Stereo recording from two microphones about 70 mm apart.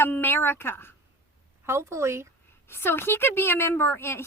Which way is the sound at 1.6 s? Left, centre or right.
Right.